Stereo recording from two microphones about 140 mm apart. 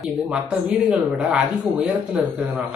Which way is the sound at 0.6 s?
10° right (ahead or behind).